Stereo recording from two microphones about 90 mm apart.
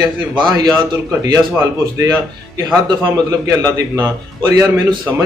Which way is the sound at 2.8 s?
45° right (ahead or behind).